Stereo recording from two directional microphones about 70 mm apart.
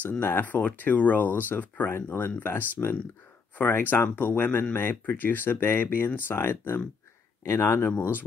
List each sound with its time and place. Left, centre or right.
0.2 s speech: left